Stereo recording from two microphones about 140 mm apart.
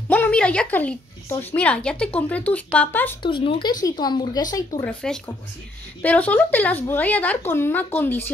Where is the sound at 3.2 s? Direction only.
35° left (ahead or behind).